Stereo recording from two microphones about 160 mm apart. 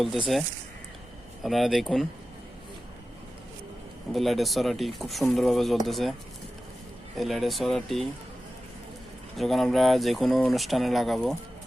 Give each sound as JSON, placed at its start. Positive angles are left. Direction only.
{"t": 0.0, "sound": "speech", "side_deg": 0}
{"t": 1.5, "sound": "speech", "side_deg": 0}
{"t": 4.1, "sound": "speech", "side_deg": 0}
{"t": 7.2, "sound": "speech", "side_deg": 0}
{"t": 9.3, "sound": "speech", "side_deg": 0}